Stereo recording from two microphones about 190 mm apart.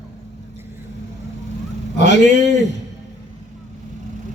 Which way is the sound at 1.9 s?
40° right (ahead or behind).